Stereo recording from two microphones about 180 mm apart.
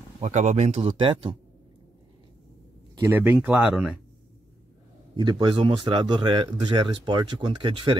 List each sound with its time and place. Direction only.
0.2 s speech: 40° right (ahead or behind)
3.0 s speech: 10° right (ahead or behind)
5.1 s speech: 25° right (ahead or behind)